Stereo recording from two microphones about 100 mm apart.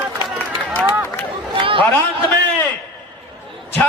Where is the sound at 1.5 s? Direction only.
60° right (ahead or behind).